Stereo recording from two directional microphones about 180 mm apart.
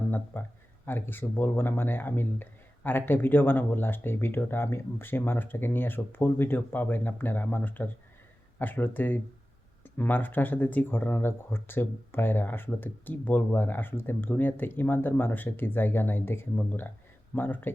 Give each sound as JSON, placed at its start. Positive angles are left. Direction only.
{"t": 0.3, "sound": "speech", "side_deg": 10}